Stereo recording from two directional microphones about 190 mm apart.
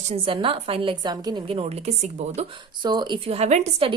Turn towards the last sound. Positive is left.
turn(degrees=-35)  # may be behind; listen again after turning